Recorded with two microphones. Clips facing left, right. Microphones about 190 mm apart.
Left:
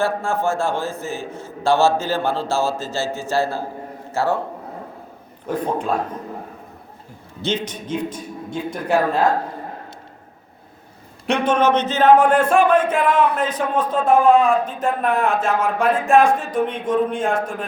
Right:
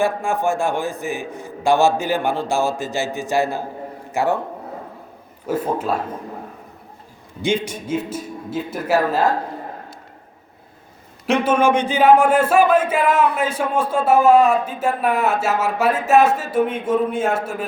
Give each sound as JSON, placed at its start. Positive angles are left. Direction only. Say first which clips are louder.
{"t": 0.0, "sound": "a man's voice", "louder": "right 1 dB", "side_deg": -15}
{"t": 5.5, "sound": "speech", "louder": "right 1 dB", "side_deg": -5}
{"t": 7.4, "sound": "speech", "louder": "right 3 dB", "side_deg": -10}
{"t": 11.3, "sound": "speech", "louder": "right 1 dB", "side_deg": -5}